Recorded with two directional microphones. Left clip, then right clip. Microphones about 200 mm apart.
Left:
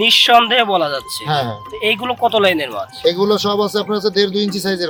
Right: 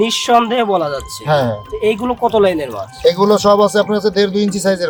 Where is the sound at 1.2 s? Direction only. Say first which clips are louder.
Right 5 dB; 25° left (ahead or behind).